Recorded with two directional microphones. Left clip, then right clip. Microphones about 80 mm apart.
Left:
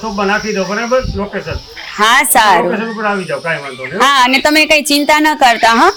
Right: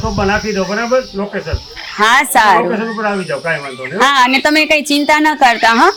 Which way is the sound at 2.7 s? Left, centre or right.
Centre.